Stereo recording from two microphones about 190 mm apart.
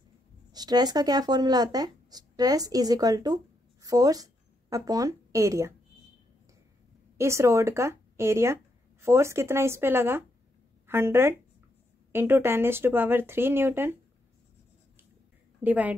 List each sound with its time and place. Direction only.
0.5 s speech: 20° right (ahead or behind)
7.2 s speech: 15° right (ahead or behind)
15.6 s speech: 10° right (ahead or behind)